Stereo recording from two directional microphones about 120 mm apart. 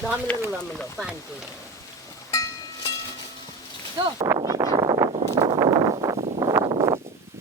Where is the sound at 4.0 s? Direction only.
45° right (ahead or behind).